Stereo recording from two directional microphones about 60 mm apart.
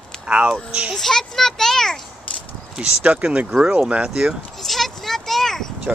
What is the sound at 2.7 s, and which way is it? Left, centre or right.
Speech, centre.